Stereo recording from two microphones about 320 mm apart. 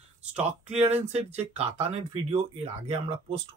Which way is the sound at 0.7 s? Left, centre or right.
Centre.